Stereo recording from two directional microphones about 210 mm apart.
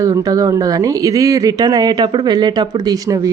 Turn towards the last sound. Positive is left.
turn(degrees=-15)  # may be behind; listen again after turning